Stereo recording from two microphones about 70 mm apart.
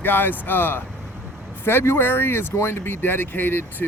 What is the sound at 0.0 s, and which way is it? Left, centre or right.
Speech, left.